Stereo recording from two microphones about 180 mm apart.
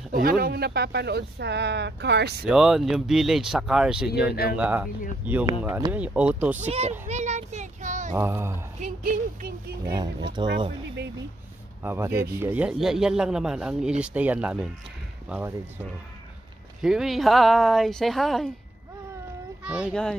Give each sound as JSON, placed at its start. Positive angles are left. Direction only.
{"t": 0.1, "sound": "speech", "side_deg": -55}
{"t": 2.4, "sound": "a man's voice", "side_deg": -5}
{"t": 6.6, "sound": "child singing", "side_deg": -40}
{"t": 8.2, "sound": "speech", "side_deg": -15}
{"t": 8.8, "sound": "speech", "side_deg": -45}
{"t": 9.8, "sound": "speech", "side_deg": -25}
{"t": 11.8, "sound": "a man's voice", "side_deg": -10}
{"t": 19.6, "sound": "a man's voice", "side_deg": -5}